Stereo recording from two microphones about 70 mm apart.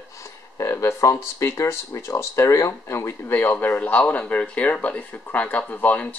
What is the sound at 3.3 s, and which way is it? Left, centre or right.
Speech, left.